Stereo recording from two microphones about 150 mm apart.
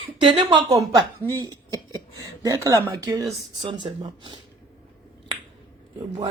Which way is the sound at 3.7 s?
35° right (ahead or behind).